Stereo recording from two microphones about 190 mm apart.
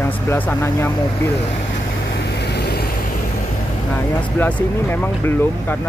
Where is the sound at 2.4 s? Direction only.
60° left (ahead or behind).